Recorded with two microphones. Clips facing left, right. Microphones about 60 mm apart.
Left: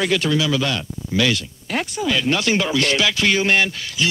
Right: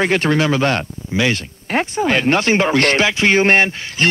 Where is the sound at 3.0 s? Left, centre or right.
Right.